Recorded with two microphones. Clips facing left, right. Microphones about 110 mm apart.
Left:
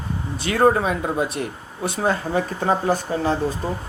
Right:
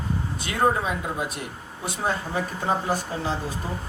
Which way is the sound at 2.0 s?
60° left (ahead or behind).